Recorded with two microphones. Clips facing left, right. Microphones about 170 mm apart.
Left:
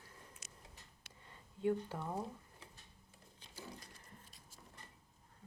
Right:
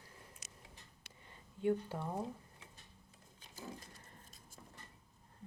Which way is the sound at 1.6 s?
20° right (ahead or behind).